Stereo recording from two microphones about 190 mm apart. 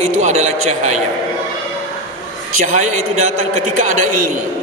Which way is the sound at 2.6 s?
40° right (ahead or behind).